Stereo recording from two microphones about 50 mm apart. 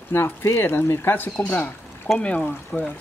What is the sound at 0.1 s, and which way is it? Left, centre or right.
Speech, left.